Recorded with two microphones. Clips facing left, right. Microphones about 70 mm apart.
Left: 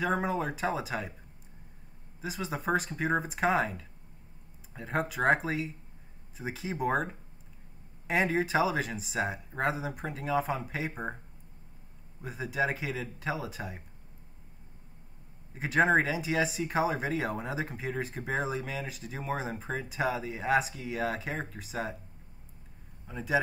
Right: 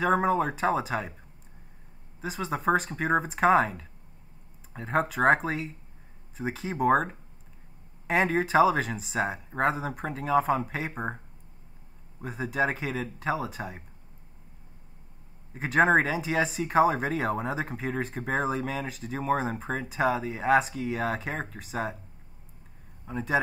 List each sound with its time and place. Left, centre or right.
0.2 s speech: centre
2.2 s speech: centre
8.1 s speech: centre
10.9 s speech: right
12.2 s speech: centre
15.5 s speech: centre
23.0 s speech: centre